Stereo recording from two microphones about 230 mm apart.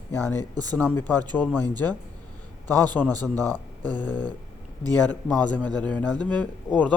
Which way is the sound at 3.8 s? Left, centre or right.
Centre.